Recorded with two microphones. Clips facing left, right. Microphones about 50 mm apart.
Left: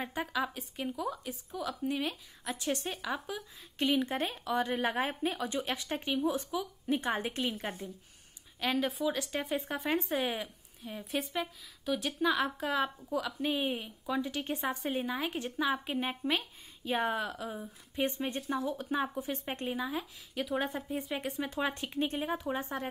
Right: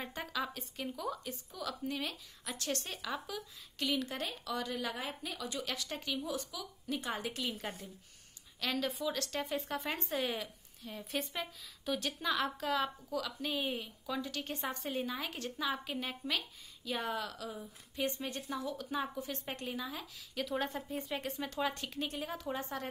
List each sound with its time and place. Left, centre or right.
0.0 s speech: centre
3.7 s speech: left